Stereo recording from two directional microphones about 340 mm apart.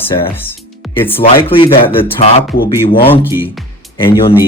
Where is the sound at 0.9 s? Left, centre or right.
Centre.